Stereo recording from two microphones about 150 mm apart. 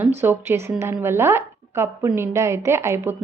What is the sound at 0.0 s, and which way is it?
A woman's voice, 15° right (ahead or behind).